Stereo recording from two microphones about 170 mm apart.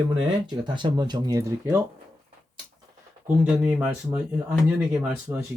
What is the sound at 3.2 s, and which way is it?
Speech, 5° right (ahead or behind).